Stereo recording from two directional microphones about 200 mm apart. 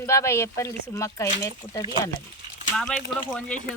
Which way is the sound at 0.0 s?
15° left (ahead or behind).